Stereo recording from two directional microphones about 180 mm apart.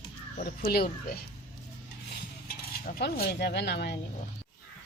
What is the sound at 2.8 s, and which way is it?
Speech, 55° left (ahead or behind).